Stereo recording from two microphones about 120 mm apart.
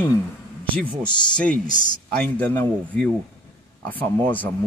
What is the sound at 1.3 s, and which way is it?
Speech, 10° left (ahead or behind).